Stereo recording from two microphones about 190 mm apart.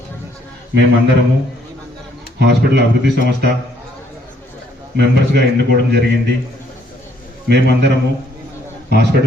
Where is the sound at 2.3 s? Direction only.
65° right (ahead or behind).